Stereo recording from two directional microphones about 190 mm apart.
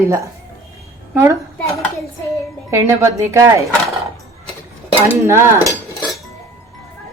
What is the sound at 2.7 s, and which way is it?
Speech, 15° right (ahead or behind).